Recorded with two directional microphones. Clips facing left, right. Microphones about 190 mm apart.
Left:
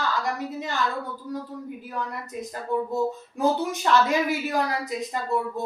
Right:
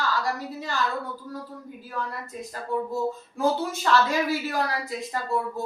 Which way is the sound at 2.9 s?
20° left (ahead or behind).